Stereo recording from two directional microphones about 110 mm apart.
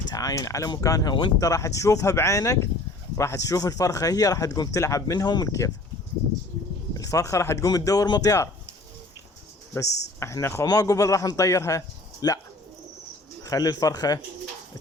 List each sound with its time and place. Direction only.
0.1 s speech: 35° left (ahead or behind)
6.9 s speech: 30° left (ahead or behind)
9.7 s speech: 25° left (ahead or behind)
13.4 s speech: 35° left (ahead or behind)